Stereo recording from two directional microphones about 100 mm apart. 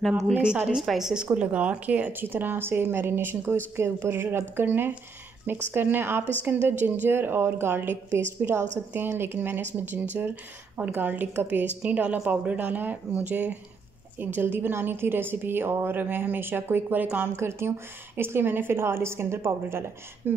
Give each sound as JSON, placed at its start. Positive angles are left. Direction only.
{"t": 0.3, "sound": "a woman's voice", "side_deg": -10}